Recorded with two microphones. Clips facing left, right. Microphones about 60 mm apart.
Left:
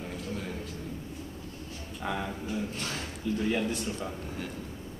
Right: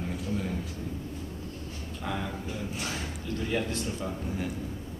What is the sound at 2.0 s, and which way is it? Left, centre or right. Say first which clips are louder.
Speech: left 1 dB; centre.